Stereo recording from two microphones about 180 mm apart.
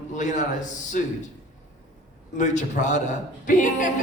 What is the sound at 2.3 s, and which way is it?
A man's voice, 45° left (ahead or behind).